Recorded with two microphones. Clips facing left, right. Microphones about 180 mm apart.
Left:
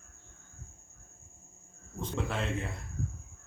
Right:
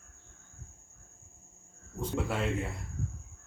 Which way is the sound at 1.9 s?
10° right (ahead or behind).